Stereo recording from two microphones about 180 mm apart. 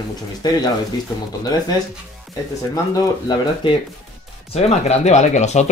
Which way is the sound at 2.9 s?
25° left (ahead or behind).